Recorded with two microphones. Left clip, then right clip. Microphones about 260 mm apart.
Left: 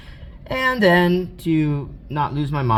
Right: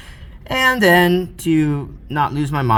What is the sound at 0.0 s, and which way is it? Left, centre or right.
Speech, right.